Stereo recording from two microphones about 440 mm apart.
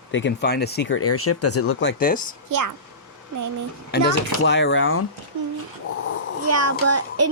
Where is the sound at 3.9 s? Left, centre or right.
Left.